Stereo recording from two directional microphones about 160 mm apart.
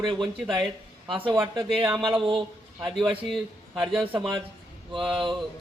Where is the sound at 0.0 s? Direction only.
30° right (ahead or behind).